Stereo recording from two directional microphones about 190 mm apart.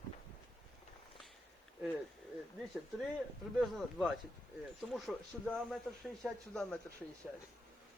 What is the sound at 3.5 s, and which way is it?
A man's voice, centre (ahead or behind).